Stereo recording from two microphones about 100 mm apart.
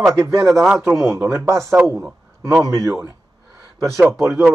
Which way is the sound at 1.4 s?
30° right (ahead or behind).